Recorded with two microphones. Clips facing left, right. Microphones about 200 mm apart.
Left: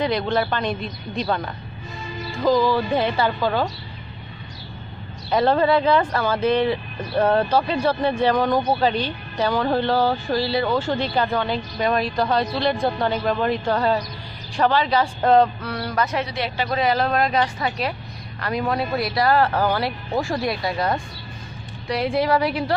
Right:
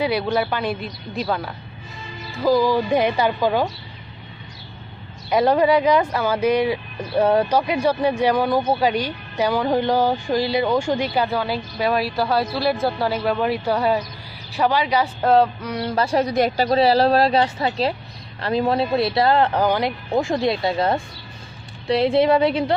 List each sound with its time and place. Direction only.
0.0 s a woman's voice: 10° right (ahead or behind)
5.3 s a woman's voice: 10° right (ahead or behind)
15.6 s speech: 20° right (ahead or behind)
16.3 s a woman's voice: 45° right (ahead or behind); by 22.8 s 25° right (ahead or behind)